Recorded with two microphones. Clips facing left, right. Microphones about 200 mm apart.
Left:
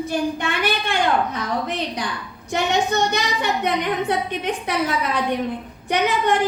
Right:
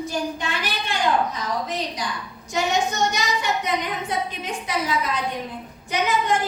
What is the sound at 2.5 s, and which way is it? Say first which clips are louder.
A woman's voice: left 2 dB; 60° left (ahead or behind).